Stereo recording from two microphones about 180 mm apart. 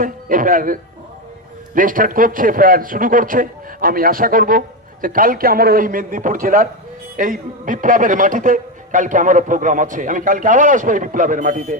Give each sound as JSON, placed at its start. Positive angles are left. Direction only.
{"t": 0.0, "sound": "a man's voice", "side_deg": -50}